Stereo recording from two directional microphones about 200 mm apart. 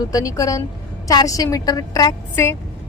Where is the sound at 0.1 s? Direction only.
15° left (ahead or behind).